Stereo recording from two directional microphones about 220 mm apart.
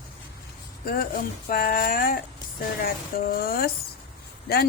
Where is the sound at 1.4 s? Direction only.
40° left (ahead or behind).